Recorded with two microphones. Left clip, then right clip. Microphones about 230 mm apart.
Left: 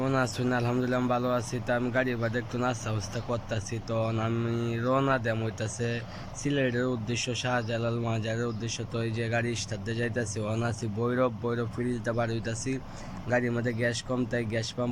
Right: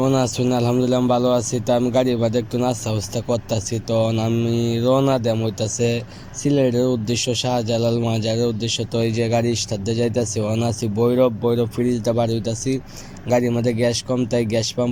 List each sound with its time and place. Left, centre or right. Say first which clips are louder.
0.0 s speech: right 9 dB; centre